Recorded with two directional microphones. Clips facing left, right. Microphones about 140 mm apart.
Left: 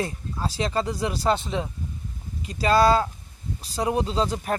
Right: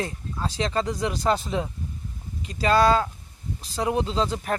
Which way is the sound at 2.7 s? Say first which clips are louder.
Left 1 dB; 35° left (ahead or behind).